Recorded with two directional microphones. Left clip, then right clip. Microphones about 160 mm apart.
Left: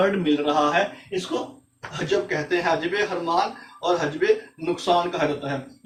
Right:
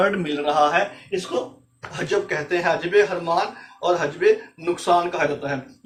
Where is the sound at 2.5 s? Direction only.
30° right (ahead or behind).